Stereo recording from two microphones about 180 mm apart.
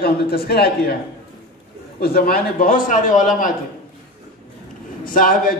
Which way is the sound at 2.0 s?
55° left (ahead or behind).